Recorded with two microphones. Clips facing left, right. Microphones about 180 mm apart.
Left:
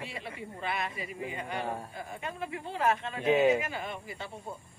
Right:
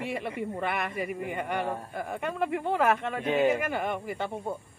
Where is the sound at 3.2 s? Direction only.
5° left (ahead or behind).